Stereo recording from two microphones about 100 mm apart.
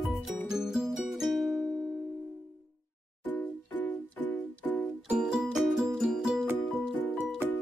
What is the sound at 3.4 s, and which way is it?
Music, 15° left (ahead or behind).